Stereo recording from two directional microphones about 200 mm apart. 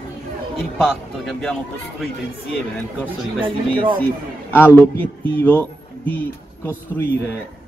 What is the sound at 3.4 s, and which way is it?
Speech, 25° right (ahead or behind).